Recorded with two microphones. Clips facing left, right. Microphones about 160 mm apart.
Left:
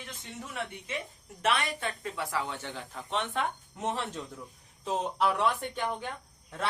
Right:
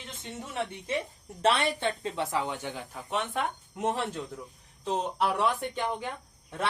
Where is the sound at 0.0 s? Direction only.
25° right (ahead or behind); by 5.5 s 5° right (ahead or behind).